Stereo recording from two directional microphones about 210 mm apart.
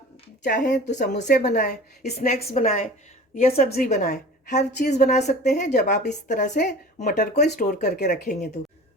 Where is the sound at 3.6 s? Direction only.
45° left (ahead or behind).